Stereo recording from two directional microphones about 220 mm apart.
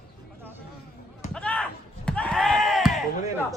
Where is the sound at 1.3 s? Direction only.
5° left (ahead or behind).